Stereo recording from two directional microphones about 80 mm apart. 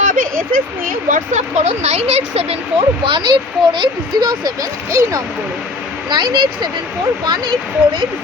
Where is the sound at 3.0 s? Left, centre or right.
Right.